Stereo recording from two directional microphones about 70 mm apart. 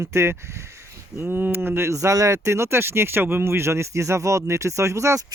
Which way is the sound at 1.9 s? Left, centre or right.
Right.